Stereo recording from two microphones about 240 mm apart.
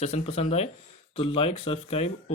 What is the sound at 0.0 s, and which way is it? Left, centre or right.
Speech, left.